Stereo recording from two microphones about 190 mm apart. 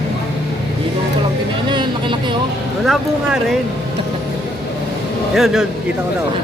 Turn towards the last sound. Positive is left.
turn(degrees=0)  # may be behind; listen again after turning